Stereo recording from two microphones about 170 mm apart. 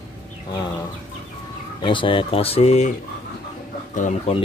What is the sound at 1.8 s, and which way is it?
Speech, 30° left (ahead or behind).